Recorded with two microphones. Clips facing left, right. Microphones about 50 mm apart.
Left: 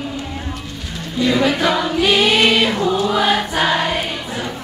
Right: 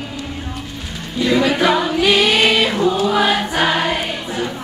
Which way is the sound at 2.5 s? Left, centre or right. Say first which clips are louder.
Even; centre.